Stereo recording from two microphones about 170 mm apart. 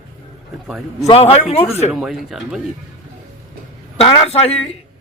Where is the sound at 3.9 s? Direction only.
35° left (ahead or behind).